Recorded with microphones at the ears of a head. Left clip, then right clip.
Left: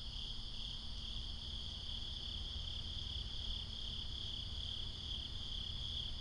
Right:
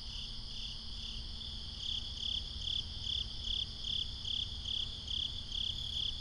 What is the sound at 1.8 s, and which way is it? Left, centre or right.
Cricket, right.